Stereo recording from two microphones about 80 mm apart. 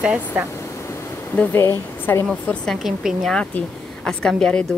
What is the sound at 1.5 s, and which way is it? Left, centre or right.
Speech, left.